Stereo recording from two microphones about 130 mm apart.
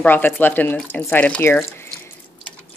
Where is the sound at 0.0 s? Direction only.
15° left (ahead or behind).